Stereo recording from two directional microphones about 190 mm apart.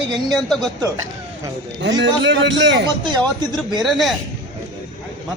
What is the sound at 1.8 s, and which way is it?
A man's voice, 70° right (ahead or behind).